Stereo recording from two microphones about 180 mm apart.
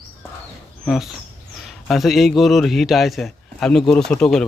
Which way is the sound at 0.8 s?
Centre (ahead or behind).